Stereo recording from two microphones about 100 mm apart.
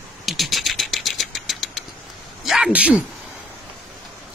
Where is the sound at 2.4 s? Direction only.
5° right (ahead or behind).